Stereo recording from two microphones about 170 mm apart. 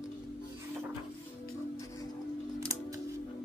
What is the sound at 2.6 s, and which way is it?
Music, 20° right (ahead or behind).